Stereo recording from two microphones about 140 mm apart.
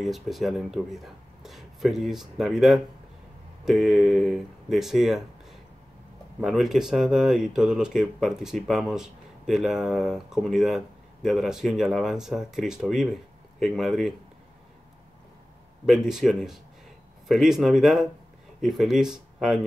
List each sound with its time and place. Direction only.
0.0 s speech: centre (ahead or behind)
6.4 s speech: centre (ahead or behind)
15.8 s speech: 5° right (ahead or behind)